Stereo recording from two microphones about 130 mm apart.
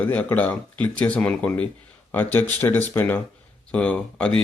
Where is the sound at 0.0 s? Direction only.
15° left (ahead or behind).